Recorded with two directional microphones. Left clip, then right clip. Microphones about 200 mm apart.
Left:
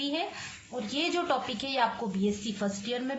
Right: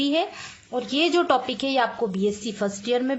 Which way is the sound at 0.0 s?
45° right (ahead or behind).